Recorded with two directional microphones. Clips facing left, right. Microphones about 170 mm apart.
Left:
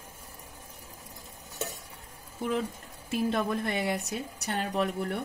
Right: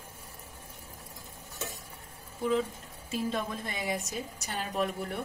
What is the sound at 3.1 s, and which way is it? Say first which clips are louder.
Speech: left 4 dB; 65° left (ahead or behind).